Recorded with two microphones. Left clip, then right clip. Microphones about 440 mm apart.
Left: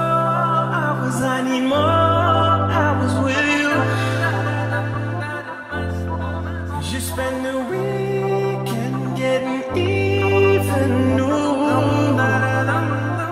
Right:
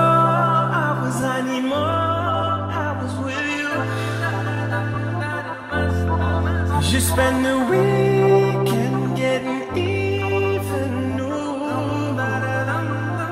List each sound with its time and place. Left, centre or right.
0.0 s music: centre
1.2 s music: left
7.2 s music: right
9.8 s music: left